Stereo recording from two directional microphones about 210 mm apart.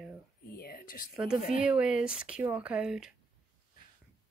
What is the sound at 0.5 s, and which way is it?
Speech, 45° left (ahead or behind).